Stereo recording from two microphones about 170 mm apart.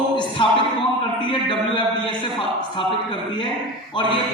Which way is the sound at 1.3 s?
30° left (ahead or behind).